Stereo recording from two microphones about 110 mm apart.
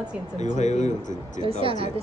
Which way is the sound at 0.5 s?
90° left.